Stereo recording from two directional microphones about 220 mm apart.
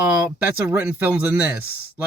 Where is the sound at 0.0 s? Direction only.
10° right (ahead or behind).